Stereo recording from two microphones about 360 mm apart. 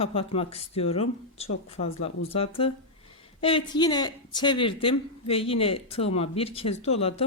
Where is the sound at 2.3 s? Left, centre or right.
Centre.